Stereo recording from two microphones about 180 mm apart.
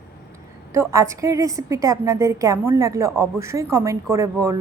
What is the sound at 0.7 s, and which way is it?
A woman's voice, 15° right (ahead or behind).